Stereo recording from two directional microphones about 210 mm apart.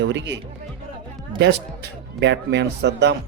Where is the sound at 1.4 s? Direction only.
55° right (ahead or behind).